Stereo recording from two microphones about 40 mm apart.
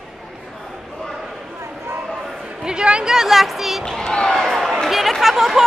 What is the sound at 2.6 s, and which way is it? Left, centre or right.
Speech, centre.